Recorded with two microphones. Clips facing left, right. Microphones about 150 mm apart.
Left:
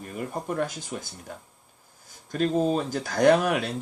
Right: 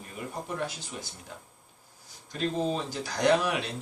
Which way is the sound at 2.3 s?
50° left (ahead or behind).